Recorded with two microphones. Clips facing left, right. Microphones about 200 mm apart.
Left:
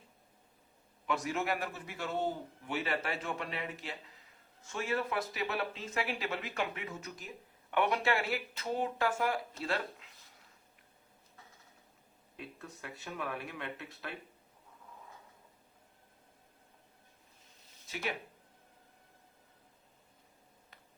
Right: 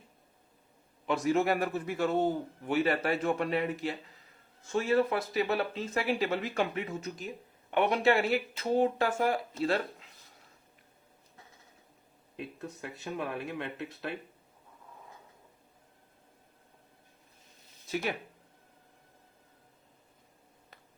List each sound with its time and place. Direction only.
1.0 s a man's voice: 30° right (ahead or behind)
4.7 s speech: 30° right (ahead or behind)
12.4 s speech: 25° right (ahead or behind)